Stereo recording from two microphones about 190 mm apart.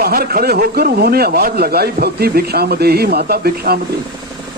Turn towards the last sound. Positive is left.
turn(degrees=-55)  # may be behind; listen again after turning